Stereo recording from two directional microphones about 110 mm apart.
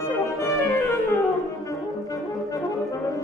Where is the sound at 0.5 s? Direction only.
20° left (ahead or behind).